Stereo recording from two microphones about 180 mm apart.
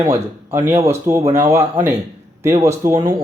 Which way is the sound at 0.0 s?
15° right (ahead or behind).